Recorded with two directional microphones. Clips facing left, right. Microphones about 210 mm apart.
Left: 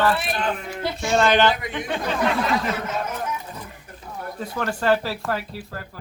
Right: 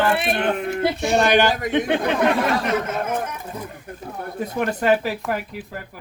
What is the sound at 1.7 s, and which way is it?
Speech, 60° right (ahead or behind).